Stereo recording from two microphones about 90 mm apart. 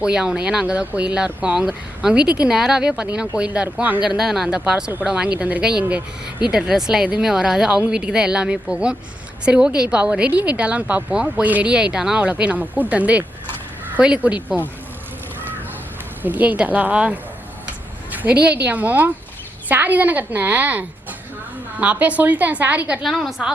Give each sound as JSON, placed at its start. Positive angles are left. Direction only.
{"t": 0.0, "sound": "a woman's voice", "side_deg": -10}
{"t": 4.2, "sound": "a woman's voice", "side_deg": -5}
{"t": 16.2, "sound": "a woman's voice", "side_deg": -20}
{"t": 23.0, "sound": "a woman's voice", "side_deg": 0}